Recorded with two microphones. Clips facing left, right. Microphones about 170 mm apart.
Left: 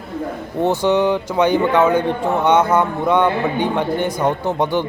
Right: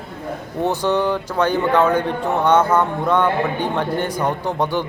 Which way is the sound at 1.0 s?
15° left (ahead or behind).